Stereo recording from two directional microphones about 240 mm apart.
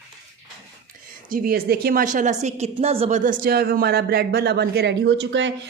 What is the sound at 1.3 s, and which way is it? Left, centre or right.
A woman's voice, right.